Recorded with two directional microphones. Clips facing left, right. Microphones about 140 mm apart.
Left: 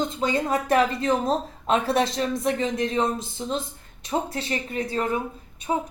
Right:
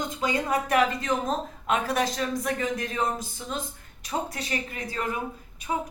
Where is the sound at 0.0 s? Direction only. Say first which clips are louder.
Left 3 dB; 30° left (ahead or behind).